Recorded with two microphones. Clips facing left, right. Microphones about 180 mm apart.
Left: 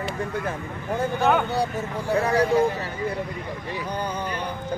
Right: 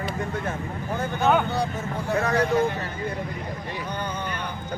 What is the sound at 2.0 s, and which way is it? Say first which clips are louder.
Speech: left 2 dB; 30° left (ahead or behind).